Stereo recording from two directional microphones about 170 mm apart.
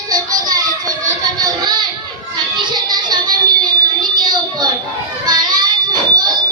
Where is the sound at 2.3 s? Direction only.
25° right (ahead or behind).